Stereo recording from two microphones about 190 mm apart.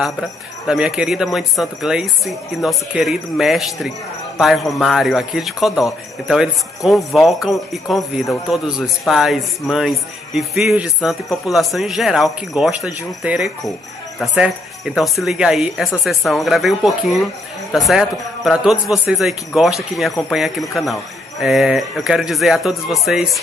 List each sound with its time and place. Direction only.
0.7 s a man's voice: 5° right (ahead or behind)